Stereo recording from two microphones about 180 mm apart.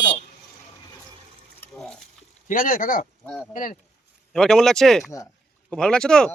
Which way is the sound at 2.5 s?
50° left (ahead or behind).